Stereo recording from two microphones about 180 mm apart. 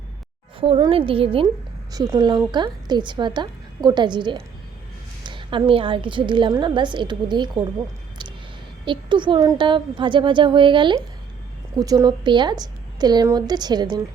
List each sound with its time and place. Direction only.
0.6 s a woman's voice: 30° right (ahead or behind)
8.8 s a woman's voice: 25° right (ahead or behind)